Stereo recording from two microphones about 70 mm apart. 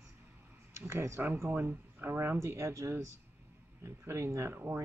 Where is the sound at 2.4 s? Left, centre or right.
Right.